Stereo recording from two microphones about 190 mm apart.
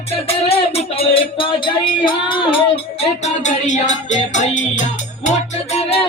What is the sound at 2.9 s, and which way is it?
Music, 35° left (ahead or behind).